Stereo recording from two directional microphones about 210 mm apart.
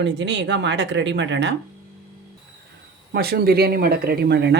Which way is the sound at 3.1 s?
45° right (ahead or behind).